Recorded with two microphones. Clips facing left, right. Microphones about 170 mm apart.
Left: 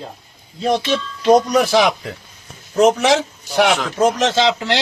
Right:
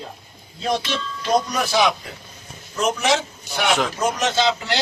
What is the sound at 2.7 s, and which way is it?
Speech, 70° left (ahead or behind).